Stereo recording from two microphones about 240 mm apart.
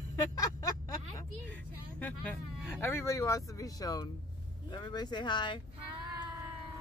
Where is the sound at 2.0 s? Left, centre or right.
Centre.